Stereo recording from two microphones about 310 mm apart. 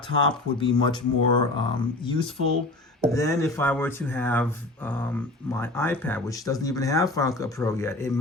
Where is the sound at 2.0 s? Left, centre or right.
Centre.